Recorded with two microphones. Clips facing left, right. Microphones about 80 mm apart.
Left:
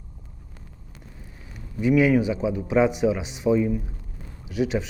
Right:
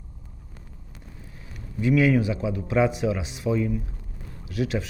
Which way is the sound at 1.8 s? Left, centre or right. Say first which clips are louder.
Left 2 dB; centre.